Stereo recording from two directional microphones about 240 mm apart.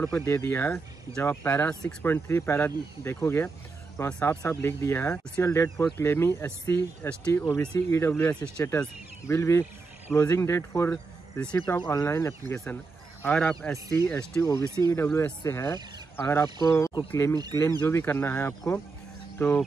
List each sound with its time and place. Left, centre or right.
0.0 s speech: centre